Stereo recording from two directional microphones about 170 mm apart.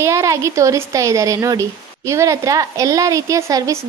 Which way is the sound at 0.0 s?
15° right (ahead or behind).